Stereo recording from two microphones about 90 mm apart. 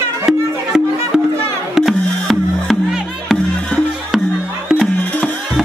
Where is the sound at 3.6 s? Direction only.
10° left (ahead or behind).